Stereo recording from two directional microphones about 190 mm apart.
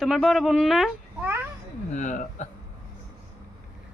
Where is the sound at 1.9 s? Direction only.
40° left (ahead or behind).